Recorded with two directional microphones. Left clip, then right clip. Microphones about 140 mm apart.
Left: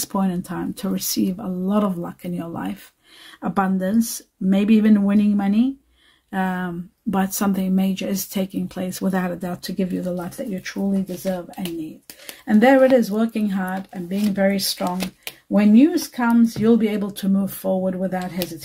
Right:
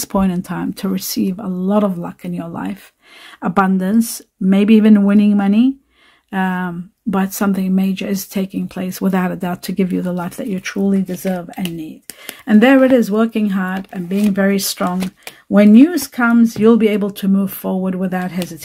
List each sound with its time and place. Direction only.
0.0 s speech: 40° right (ahead or behind)
3.3 s speech: 45° right (ahead or behind)
9.8 s speech: 60° right (ahead or behind)
12.3 s speech: 50° right (ahead or behind)
17.9 s speech: 60° right (ahead or behind)